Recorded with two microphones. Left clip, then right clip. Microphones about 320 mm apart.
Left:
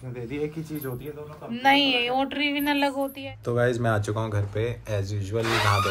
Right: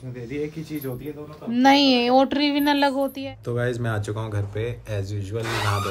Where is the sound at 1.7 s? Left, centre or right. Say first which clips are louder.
Right 4 dB; right.